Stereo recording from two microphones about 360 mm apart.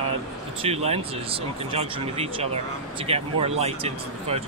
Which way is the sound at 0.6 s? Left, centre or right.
Centre.